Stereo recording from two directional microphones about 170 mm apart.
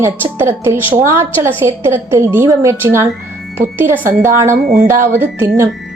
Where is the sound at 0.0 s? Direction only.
15° right (ahead or behind).